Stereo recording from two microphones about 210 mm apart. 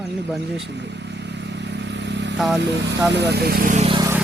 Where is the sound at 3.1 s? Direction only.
55° right (ahead or behind).